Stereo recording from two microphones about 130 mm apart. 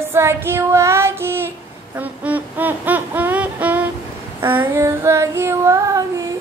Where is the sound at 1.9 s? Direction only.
10° right (ahead or behind).